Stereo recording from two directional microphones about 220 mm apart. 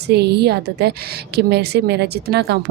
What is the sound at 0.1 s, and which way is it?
Speech, 50° right (ahead or behind).